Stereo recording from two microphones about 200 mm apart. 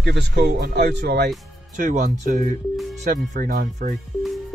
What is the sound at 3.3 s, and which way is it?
Speech, 40° right (ahead or behind).